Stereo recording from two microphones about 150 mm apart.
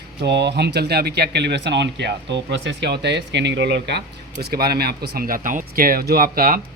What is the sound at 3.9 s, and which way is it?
Speech, 90° right.